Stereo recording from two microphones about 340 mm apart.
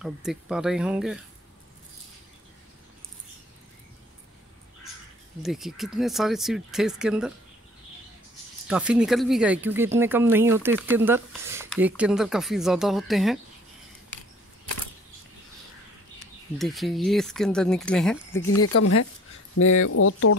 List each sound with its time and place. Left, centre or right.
0.0 s speech: centre
5.4 s speech: centre
8.6 s speech: centre
16.5 s speech: centre
18.6 s speech: left